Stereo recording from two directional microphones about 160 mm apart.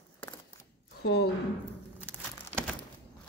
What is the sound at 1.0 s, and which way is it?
Speech, 90° left.